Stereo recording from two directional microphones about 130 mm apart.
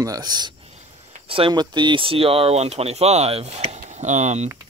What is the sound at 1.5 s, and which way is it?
Speech, 35° right (ahead or behind).